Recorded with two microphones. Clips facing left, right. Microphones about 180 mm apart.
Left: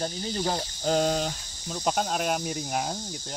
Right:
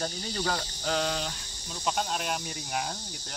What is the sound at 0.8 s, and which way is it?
Speech, 40° left (ahead or behind).